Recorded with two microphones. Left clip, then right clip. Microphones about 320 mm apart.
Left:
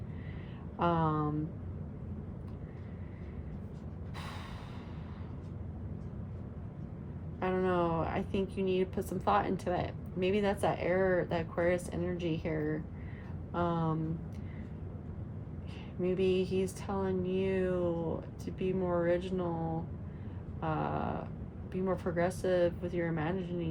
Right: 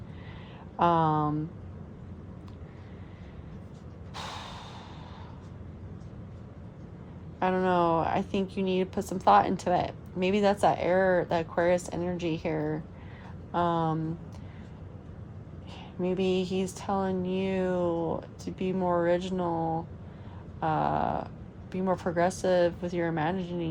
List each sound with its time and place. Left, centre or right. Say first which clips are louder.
0.8 s a sound: right 7 dB; right
4.1 s mechanisms: right 7 dB; right
7.3 s speech: right 6 dB; right
16.1 s speech: right 2 dB; right
20.6 s speech: right 8 dB; right